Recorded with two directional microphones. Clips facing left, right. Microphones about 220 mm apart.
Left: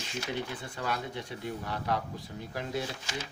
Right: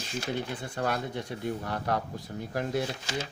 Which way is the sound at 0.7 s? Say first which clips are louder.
Right 5 dB; 50° right (ahead or behind).